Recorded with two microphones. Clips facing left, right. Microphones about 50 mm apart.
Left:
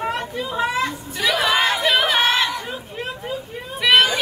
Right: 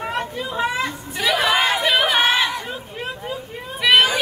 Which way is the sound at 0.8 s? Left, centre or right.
Centre.